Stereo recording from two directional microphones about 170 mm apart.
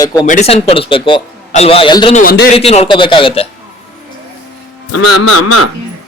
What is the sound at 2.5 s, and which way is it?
Speech, 35° left (ahead or behind).